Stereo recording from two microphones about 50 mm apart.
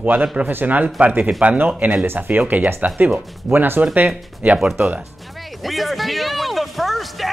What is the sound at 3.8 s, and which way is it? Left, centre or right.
Speech, right.